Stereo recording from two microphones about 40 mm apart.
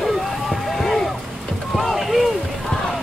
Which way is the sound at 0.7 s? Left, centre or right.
Centre.